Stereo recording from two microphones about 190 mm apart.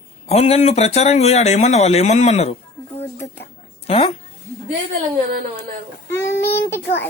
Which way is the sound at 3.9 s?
30° left (ahead or behind).